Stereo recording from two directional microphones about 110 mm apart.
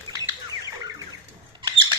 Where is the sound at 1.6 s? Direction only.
45° right (ahead or behind).